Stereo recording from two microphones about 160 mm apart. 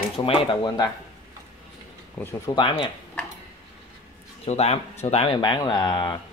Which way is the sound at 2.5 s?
30° left (ahead or behind).